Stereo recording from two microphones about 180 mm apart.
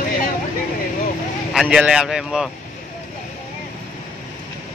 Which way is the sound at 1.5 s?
Centre (ahead or behind).